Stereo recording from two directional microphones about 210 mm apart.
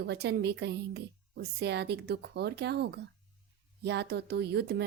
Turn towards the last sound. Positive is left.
turn(degrees=-55)  # may be behind; listen again after turning